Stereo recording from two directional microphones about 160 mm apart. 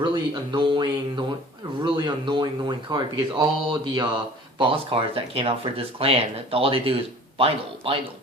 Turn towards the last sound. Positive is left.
turn(degrees=-35)  # may be behind; listen again after turning